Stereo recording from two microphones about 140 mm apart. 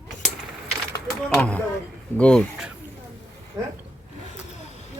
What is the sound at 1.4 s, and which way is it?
Speech, 10° left (ahead or behind).